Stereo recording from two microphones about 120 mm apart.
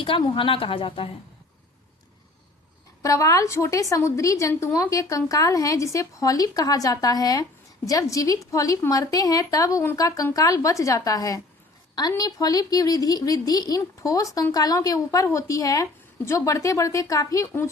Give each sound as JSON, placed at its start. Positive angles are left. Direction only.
{"t": 0.2, "sound": "a woman's voice", "side_deg": 45}
{"t": 3.0, "sound": "a woman's voice", "side_deg": 25}